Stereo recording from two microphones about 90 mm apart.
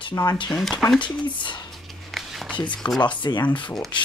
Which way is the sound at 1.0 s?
60° left (ahead or behind).